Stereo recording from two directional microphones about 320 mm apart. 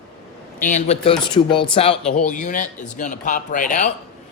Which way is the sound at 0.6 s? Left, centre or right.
Left.